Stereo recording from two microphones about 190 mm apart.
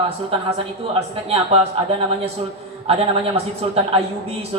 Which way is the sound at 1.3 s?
30° right (ahead or behind).